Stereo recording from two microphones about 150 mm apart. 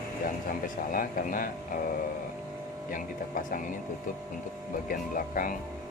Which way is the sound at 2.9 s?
60° left (ahead or behind).